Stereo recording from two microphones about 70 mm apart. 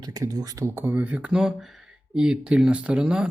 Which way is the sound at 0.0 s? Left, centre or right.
Right.